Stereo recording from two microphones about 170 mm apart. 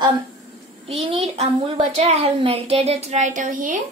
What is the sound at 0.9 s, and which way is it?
A woman's voice, 35° right (ahead or behind).